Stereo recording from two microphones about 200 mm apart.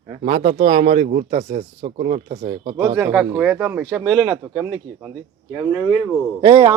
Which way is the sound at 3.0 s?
10° right (ahead or behind).